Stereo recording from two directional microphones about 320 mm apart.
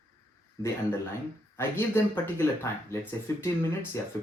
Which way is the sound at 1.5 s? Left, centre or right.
Centre.